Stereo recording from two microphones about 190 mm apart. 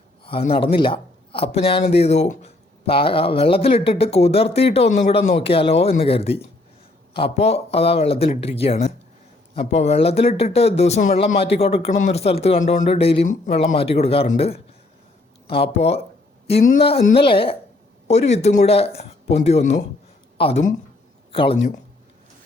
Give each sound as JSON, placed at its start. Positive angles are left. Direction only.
{"t": 0.3, "sound": "a woman's voice", "side_deg": 30}